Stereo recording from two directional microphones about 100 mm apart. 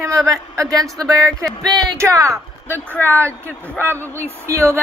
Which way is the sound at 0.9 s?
35° right (ahead or behind).